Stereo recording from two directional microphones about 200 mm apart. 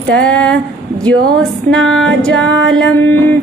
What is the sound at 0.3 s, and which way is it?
Female singing, 5° left (ahead or behind).